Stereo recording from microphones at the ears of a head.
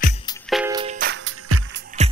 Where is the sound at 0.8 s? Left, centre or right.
Right.